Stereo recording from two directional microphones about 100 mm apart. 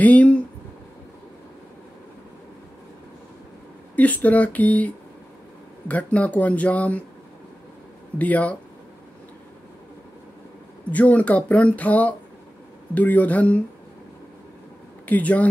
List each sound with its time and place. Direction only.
0.0 s speech: 15° left (ahead or behind)
3.9 s speech: 15° left (ahead or behind)
8.2 s speech: 15° left (ahead or behind)
10.9 s speech: 15° left (ahead or behind)
15.0 s speech: 15° left (ahead or behind)